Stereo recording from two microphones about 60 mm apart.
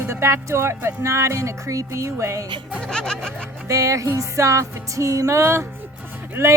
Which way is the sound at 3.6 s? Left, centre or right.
Right.